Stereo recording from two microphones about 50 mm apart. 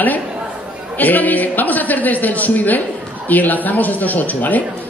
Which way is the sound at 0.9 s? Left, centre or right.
Left.